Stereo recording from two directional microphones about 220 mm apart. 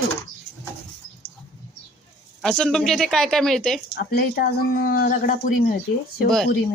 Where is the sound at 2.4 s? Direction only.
5° left (ahead or behind).